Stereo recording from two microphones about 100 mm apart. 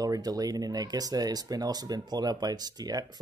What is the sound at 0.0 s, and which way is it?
Speech, 40° right (ahead or behind).